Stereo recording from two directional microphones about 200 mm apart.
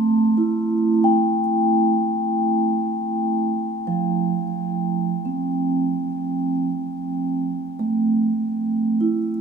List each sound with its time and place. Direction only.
0.5 s music: 20° left (ahead or behind)